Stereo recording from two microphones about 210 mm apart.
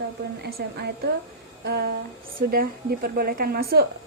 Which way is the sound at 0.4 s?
50° right (ahead or behind).